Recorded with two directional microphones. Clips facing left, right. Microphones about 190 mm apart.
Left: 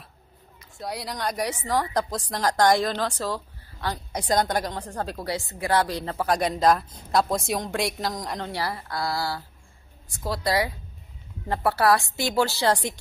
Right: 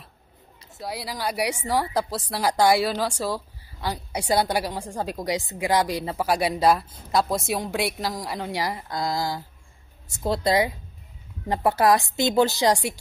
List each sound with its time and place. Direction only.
0.7 s a woman's voice: centre (ahead or behind)